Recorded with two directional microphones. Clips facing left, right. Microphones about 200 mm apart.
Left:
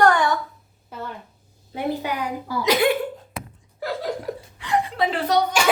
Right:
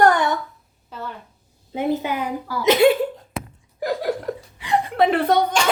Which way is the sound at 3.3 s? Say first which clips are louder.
Right 4 dB; 15° right (ahead or behind).